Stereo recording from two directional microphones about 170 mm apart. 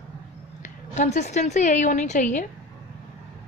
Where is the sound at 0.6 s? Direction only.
45° left (ahead or behind).